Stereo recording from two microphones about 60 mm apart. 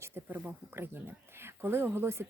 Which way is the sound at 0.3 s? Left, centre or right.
Right.